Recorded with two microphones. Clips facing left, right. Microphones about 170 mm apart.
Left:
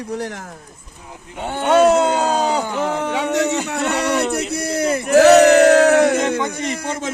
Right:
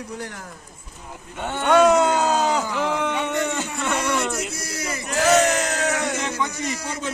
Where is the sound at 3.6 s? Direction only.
70° left (ahead or behind).